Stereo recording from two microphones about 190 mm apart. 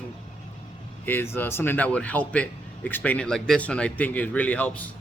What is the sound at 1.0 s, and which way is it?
A man's voice, 10° left (ahead or behind).